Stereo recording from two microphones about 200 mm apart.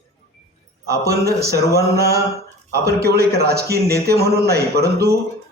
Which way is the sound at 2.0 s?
50° right (ahead or behind).